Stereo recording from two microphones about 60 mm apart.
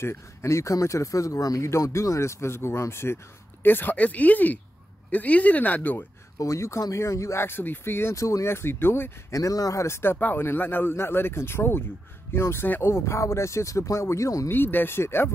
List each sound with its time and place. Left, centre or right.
0.0 s speech: left
1.6 s speech: left
3.6 s speech: left
6.3 s speech: left
8.2 s speech: left
9.3 s speech: left
9.8 s speech: left
10.1 s speech: left
14.5 s speech: left